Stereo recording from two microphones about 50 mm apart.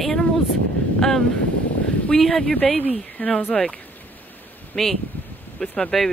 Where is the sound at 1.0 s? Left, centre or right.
Centre.